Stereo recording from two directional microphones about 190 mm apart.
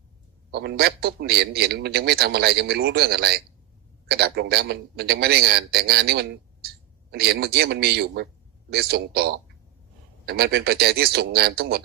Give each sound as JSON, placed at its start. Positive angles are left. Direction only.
{"t": 0.5, "sound": "a man's voice", "side_deg": -60}